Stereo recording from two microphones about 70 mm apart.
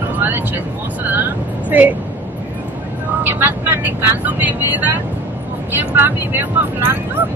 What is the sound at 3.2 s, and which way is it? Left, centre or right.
Vehicle, right.